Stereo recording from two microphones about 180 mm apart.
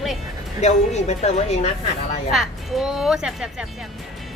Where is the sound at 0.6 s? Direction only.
40° left (ahead or behind).